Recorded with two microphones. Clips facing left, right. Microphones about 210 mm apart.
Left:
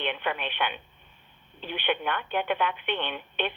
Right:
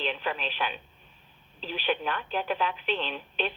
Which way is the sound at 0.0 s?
35° right (ahead or behind).